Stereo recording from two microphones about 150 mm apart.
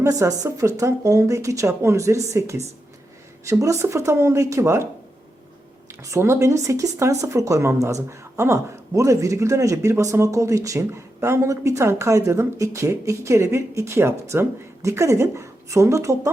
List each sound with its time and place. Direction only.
0.0 s speech: 20° right (ahead or behind)
3.4 s speech: 20° right (ahead or behind)
5.9 s speech: 20° right (ahead or behind)